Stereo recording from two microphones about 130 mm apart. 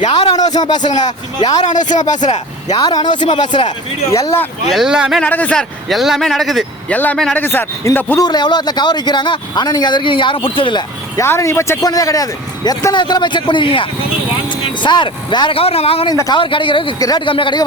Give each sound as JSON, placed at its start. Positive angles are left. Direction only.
{"t": 0.3, "sound": "speech", "side_deg": 30}
{"t": 0.8, "sound": "speech", "side_deg": 65}
{"t": 2.7, "sound": "speech", "side_deg": 30}
{"t": 4.7, "sound": "speech", "side_deg": -5}
{"t": 5.2, "sound": "speech", "side_deg": 10}
{"t": 6.9, "sound": "a man's voice", "side_deg": 10}
{"t": 8.2, "sound": "speech", "side_deg": 35}
{"t": 11.2, "sound": "speech", "side_deg": 20}